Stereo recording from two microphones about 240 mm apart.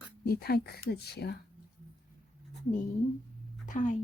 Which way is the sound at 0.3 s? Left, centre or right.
Left.